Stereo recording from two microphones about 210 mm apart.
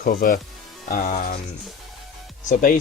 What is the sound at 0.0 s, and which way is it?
Speech, 40° left (ahead or behind).